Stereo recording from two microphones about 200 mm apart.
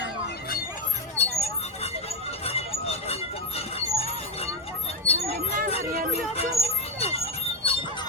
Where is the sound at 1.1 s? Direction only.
30° left (ahead or behind).